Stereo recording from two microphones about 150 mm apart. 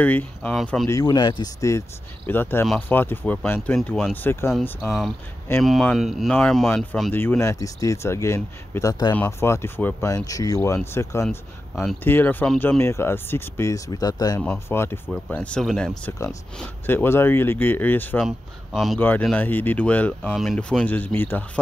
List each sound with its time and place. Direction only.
0.0 s speech: 10° left (ahead or behind)
0.8 s speech: 25° left (ahead or behind)
1.6 s speech: 20° left (ahead or behind)
4.7 s speech: centre (ahead or behind); by 11.2 s 20° left (ahead or behind)
11.2 s speech: 5° left (ahead or behind)
12.0 s speech: 15° left (ahead or behind)
14.4 s speech: 10° left (ahead or behind)
16.8 s speech: 15° left (ahead or behind)
18.2 s speech: centre (ahead or behind)
18.9 s speech: 10° left (ahead or behind)
20.2 s speech: centre (ahead or behind)